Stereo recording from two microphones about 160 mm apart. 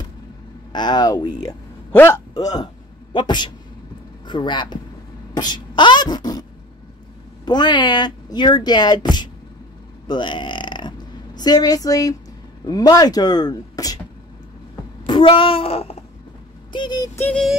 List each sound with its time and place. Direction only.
0.7 s speech: 25° left (ahead or behind)
7.4 s speech: 25° left (ahead or behind)
10.0 s a sound: 30° left (ahead or behind)
12.6 s speech: 25° left (ahead or behind)
15.0 s a sound: 30° left (ahead or behind)
16.7 s speech: 25° left (ahead or behind)
17.3 s synthetic singing: centre (ahead or behind)